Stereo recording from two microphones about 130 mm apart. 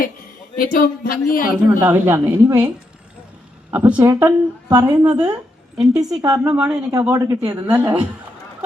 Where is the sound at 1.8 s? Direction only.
20° right (ahead or behind).